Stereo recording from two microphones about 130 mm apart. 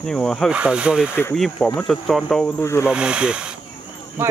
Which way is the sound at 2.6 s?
20° left (ahead or behind).